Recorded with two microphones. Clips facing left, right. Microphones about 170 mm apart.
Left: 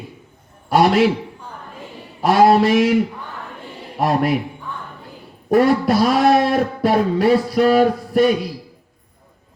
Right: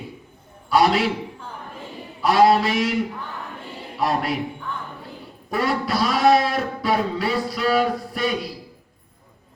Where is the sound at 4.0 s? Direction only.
55° left (ahead or behind).